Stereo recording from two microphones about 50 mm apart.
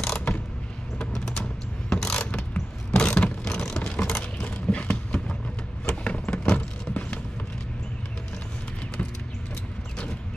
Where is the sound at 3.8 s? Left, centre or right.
Left.